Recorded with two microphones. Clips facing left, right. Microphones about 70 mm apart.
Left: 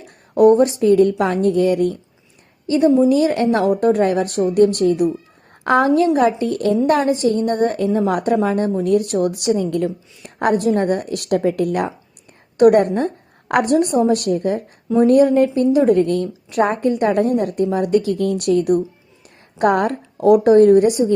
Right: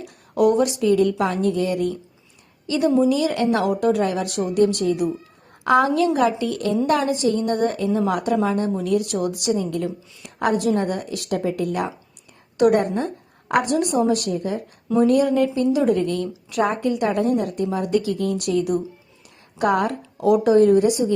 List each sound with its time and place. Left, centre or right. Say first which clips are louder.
0.0 s a woman's voice: left 6 dB; left
5.9 s a woman's voice: left 4 dB; left
14.9 s a woman's voice: left 5 dB; left